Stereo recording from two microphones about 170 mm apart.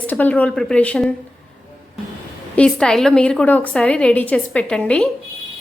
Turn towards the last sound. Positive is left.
turn(degrees=0)  # may be behind; listen again after turning